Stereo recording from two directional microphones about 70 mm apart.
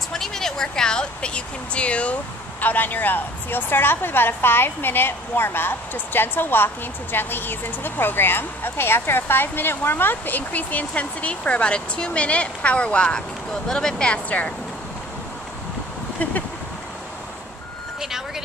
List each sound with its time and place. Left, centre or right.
0.1 s a sound: centre
2.6 s a woman's voice: left
18.0 s speech: centre